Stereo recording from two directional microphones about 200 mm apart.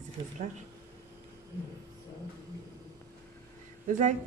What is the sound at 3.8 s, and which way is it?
Speech, 40° right (ahead or behind).